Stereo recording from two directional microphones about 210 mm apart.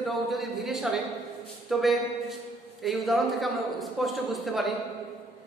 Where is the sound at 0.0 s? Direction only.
Centre (ahead or behind).